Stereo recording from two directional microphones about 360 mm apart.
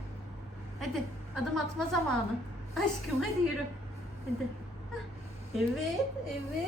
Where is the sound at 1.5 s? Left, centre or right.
Centre.